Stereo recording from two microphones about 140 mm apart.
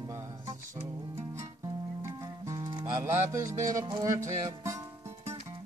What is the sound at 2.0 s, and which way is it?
Music, 20° right (ahead or behind).